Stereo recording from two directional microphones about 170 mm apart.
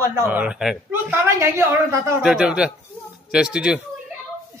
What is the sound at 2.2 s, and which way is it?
Speech, 5° right (ahead or behind).